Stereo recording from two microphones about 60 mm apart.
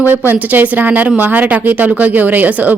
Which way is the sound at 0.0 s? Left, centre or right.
Right.